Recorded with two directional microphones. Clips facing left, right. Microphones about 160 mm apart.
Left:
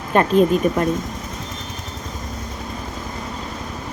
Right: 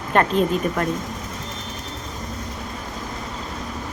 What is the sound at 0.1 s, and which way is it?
Speech, 15° left (ahead or behind).